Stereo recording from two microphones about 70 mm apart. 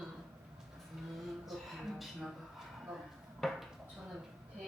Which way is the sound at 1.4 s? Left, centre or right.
Centre.